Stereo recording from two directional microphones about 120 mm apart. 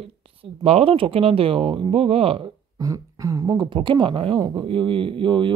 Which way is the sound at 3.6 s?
45° right (ahead or behind).